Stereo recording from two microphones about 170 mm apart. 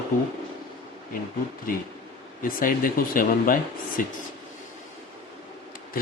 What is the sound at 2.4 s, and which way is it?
Speech, 55° left (ahead or behind).